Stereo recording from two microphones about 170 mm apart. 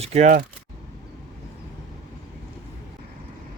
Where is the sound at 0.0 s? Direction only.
40° right (ahead or behind).